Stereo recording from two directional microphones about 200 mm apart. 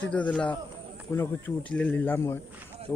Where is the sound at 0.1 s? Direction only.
5° left (ahead or behind).